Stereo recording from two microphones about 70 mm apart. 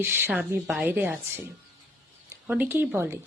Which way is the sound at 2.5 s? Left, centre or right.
Right.